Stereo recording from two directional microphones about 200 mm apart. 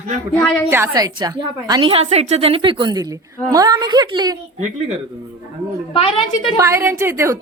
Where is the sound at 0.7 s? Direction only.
15° right (ahead or behind).